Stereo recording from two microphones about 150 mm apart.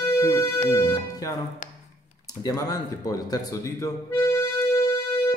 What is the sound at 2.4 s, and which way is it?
Speech, 25° left (ahead or behind).